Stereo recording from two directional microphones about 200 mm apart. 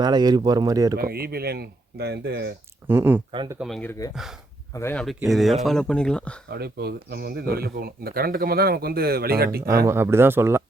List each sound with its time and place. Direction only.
0.0 s speech: 20° right (ahead or behind)
0.9 s speech: 50° right (ahead or behind)
2.8 s speech: 10° right (ahead or behind)
3.3 s speech: 20° right (ahead or behind)
3.6 s speech: 5° left (ahead or behind)
4.7 s speech: 10° left (ahead or behind)
5.0 s speech: centre (ahead or behind)
6.5 s speech: 55° right (ahead or behind)
9.6 s speech: 15° right (ahead or behind)